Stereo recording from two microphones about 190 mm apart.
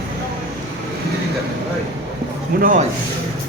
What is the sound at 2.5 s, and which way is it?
Speech, 45° right (ahead or behind).